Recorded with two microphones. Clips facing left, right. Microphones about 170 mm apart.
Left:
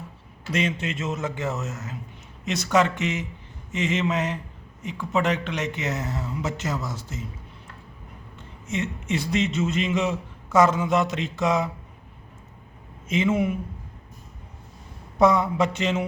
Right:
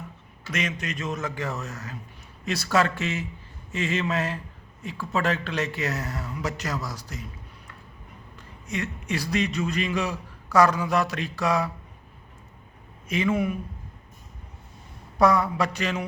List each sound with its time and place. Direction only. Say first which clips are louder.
0.5 s speech: left 4 dB; 30° left (ahead or behind)
8.4 s a man's voice: left 3 dB; 25° left (ahead or behind)
13.1 s speech: left 2 dB; 25° left (ahead or behind)
15.2 s speech: left 2 dB; 20° left (ahead or behind)